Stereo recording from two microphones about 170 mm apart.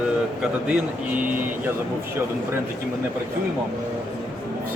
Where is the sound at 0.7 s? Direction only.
10° right (ahead or behind).